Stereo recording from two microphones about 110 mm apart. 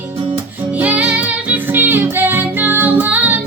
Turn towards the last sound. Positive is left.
turn(degrees=-15)  # may be behind; listen again after turning